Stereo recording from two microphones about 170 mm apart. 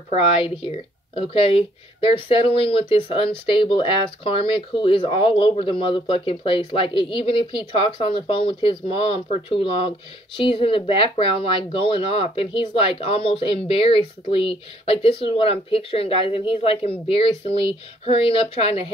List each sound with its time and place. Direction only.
0.1 s speech: 35° left (ahead or behind)